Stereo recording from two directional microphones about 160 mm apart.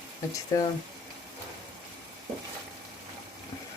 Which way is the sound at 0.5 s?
20° left (ahead or behind).